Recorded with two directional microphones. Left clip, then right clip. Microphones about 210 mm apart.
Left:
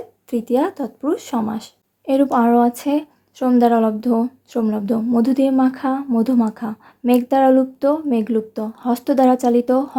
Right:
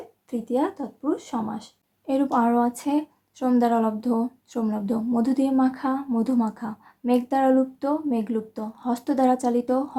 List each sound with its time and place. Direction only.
0.3 s speech: 40° left (ahead or behind)